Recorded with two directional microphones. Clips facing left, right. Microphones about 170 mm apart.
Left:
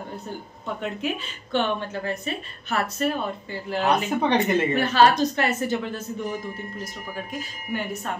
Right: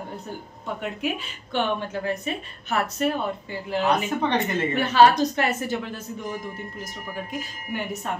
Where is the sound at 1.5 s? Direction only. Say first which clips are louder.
Left 1 dB; 15° right (ahead or behind).